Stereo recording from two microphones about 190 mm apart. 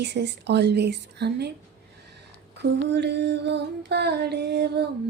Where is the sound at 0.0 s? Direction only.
65° right (ahead or behind).